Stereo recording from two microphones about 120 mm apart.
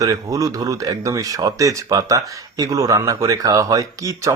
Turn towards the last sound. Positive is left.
turn(degrees=-30)  # may be behind; listen again after turning